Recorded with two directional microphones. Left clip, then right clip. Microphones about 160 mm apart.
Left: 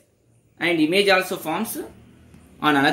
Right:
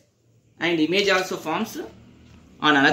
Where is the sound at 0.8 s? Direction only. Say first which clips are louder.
Left 3 dB; 35° left (ahead or behind).